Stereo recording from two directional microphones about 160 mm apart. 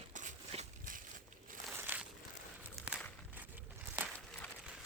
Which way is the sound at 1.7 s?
10° right (ahead or behind).